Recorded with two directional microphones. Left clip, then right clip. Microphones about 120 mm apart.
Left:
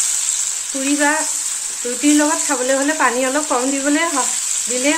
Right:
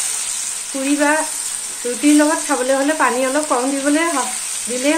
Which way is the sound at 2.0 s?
15° left (ahead or behind).